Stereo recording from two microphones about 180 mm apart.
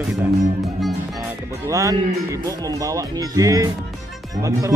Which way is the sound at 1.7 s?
20° right (ahead or behind).